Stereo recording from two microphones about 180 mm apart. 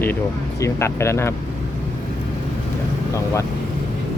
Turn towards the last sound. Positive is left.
turn(degrees=15)  # may be behind; listen again after turning